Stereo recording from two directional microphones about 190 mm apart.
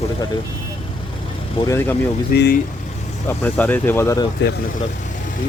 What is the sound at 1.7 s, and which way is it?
Speech, 10° left (ahead or behind).